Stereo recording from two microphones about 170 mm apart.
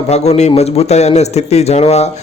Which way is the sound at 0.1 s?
40° left (ahead or behind).